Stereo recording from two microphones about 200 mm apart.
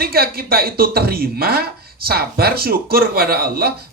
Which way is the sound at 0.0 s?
50° right (ahead or behind).